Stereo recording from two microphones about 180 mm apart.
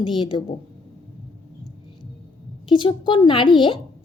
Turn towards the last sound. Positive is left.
turn(degrees=25)  # may be behind; listen again after turning